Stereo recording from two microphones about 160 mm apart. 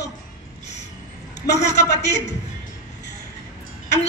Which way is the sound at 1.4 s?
90° left.